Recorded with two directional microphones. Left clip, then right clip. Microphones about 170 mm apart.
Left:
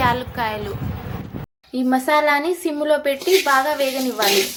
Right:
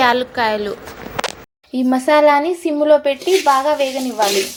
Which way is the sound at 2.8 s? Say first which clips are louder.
Right 6 dB; centre (ahead or behind).